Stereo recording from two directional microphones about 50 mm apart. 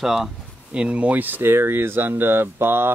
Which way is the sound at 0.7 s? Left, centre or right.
Right.